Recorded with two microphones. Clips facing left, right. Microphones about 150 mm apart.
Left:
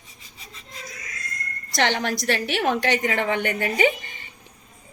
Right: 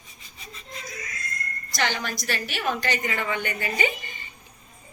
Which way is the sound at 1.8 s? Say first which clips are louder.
Left 5 dB; 65° left (ahead or behind).